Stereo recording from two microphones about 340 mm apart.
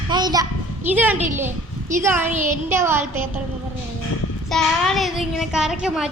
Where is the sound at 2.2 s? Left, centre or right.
Right.